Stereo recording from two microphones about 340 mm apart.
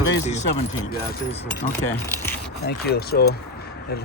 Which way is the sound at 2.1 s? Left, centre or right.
Centre.